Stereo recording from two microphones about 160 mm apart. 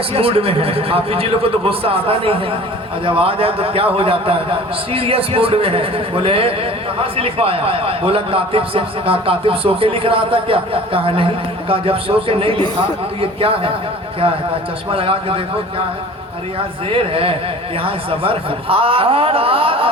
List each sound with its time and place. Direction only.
0.1 s a man's voice: 35° right (ahead or behind)
14.9 s a man's voice: 35° right (ahead or behind)
16.9 s a man's voice: 35° right (ahead or behind)